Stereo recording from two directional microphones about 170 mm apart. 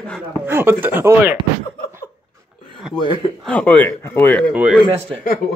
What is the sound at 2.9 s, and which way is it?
Speech, 30° left (ahead or behind).